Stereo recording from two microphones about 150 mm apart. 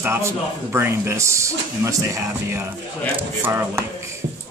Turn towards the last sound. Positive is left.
turn(degrees=-15)  # may be behind; listen again after turning